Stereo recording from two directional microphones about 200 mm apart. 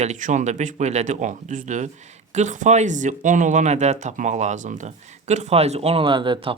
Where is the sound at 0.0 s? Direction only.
40° right (ahead or behind).